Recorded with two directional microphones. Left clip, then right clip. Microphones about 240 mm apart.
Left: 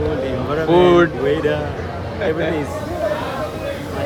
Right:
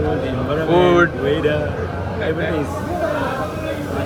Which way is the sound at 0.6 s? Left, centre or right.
Centre.